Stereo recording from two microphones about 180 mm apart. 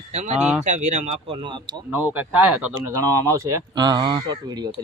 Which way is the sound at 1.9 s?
10° right (ahead or behind).